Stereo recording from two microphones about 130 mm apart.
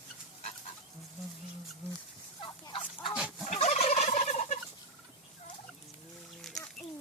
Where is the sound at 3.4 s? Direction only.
60° left (ahead or behind).